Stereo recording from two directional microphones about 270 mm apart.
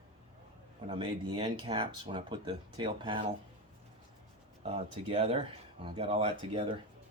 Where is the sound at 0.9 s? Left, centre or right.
Centre.